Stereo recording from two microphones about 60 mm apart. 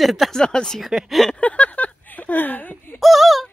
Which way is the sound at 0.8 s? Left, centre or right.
Centre.